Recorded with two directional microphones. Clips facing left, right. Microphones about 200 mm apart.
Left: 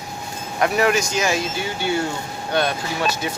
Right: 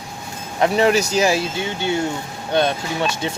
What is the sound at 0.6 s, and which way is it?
Speech, 30° right (ahead or behind).